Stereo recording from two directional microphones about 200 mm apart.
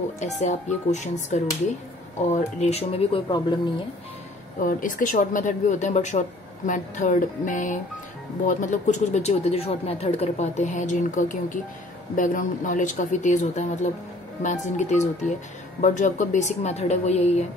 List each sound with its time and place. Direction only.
0.2 s speech: 35° left (ahead or behind); by 3.5 s 20° left (ahead or behind)
4.6 s speech: 45° left (ahead or behind)